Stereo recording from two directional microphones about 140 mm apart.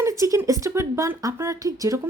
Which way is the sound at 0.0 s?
20° right (ahead or behind).